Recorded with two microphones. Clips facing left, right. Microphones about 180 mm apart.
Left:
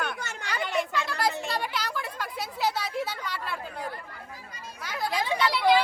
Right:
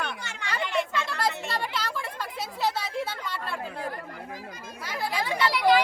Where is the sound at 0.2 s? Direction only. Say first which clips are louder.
Left 3 dB; 45° left (ahead or behind).